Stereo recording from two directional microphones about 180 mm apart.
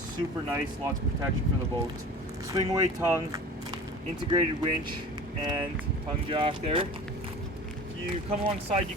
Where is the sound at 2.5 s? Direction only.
20° right (ahead or behind).